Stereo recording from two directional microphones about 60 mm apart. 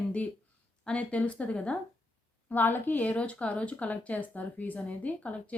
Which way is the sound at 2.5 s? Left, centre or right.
Left.